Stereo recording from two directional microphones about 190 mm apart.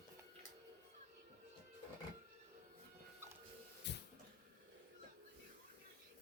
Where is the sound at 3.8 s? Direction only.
65° left (ahead or behind).